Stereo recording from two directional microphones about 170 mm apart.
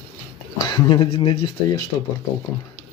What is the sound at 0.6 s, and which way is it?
Speech, 25° left (ahead or behind).